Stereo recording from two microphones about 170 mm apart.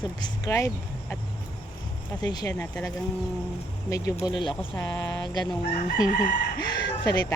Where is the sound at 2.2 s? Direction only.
25° left (ahead or behind).